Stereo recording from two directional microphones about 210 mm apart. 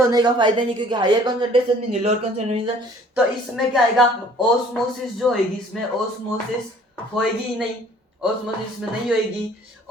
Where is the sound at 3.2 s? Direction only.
Centre (ahead or behind).